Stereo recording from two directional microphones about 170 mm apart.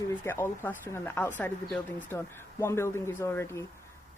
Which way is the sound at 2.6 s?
15° left (ahead or behind).